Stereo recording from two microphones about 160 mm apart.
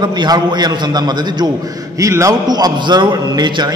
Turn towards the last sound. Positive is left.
turn(degrees=-25)  # may be behind; listen again after turning